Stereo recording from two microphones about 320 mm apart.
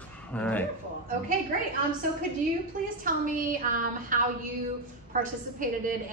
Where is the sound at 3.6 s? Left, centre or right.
Right.